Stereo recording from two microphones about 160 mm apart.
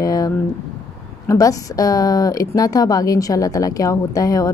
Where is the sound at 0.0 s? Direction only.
25° left (ahead or behind).